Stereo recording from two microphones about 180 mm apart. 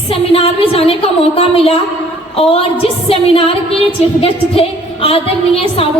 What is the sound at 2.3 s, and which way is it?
A woman's voice, 30° left (ahead or behind).